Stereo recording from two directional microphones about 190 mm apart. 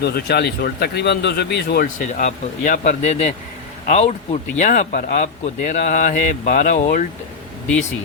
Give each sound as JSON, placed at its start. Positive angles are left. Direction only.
{"t": 0.0, "sound": "speech", "side_deg": 60}